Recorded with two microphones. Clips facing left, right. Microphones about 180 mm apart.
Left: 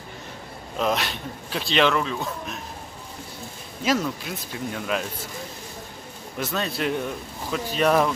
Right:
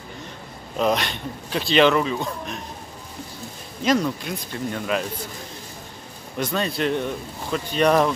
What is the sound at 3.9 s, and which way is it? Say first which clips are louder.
Speech: right 3 dB; 5° left (ahead or behind).